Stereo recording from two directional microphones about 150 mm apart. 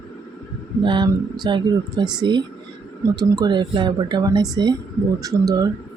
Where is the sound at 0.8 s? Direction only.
30° right (ahead or behind).